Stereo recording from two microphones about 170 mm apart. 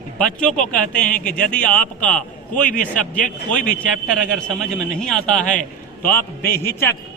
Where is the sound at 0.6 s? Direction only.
50° left (ahead or behind).